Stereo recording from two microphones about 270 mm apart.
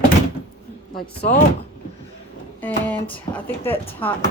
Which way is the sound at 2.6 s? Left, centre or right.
Centre.